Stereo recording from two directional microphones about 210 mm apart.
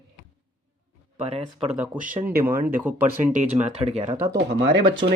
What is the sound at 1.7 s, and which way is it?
Speech, 5° right (ahead or behind).